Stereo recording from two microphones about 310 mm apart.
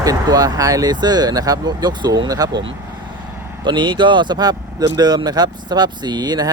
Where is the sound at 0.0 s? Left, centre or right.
Centre.